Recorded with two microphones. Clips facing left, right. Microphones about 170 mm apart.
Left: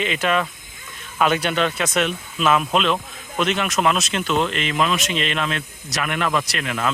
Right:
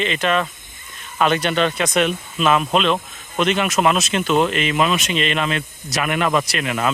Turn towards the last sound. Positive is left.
turn(degrees=-10)  # may be behind; listen again after turning